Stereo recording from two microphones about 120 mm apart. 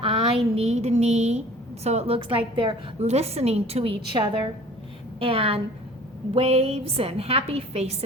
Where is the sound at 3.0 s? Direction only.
65° right (ahead or behind).